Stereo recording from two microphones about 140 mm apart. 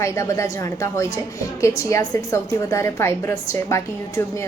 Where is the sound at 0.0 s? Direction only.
20° left (ahead or behind).